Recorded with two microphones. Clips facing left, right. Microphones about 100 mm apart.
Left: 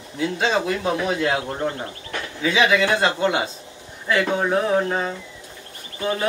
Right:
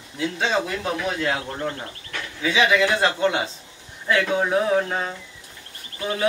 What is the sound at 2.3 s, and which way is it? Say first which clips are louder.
A man's voice: left 1 dB; centre (ahead or behind).